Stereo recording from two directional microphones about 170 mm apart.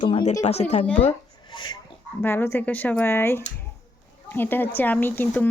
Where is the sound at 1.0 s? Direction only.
35° left (ahead or behind).